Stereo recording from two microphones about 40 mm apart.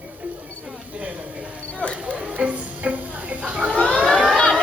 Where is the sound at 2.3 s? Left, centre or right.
Right.